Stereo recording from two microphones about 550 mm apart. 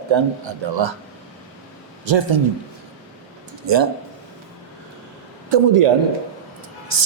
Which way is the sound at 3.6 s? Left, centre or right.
Right.